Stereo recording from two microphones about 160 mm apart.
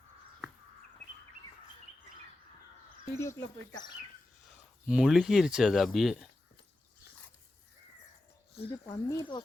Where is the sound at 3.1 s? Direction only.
20° left (ahead or behind).